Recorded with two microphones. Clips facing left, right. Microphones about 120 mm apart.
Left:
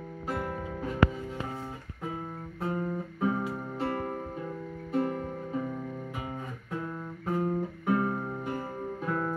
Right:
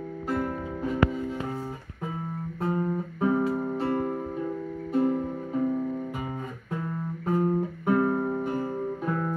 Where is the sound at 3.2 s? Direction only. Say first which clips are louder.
Right 6 dB; 15° right (ahead or behind).